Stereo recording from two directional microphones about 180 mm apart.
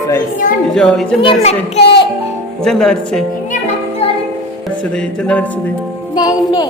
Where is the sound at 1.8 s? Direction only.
70° left (ahead or behind).